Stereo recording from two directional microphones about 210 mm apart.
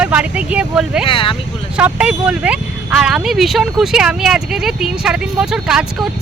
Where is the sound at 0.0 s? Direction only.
5° right (ahead or behind).